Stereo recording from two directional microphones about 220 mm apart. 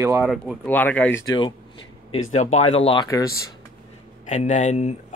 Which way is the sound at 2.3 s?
30° left (ahead or behind).